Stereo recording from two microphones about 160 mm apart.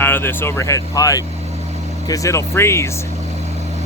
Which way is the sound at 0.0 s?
15° left (ahead or behind).